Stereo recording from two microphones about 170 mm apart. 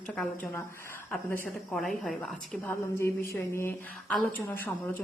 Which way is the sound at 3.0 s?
15° left (ahead or behind).